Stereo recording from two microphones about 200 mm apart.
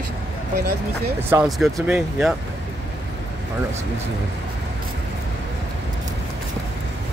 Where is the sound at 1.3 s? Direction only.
5° right (ahead or behind).